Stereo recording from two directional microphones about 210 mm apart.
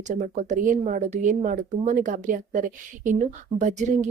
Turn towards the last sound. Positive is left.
turn(degrees=-35)  # may be behind; listen again after turning